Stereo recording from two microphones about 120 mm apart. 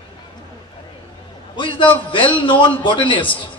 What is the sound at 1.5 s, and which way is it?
A man's voice, 45° left (ahead or behind).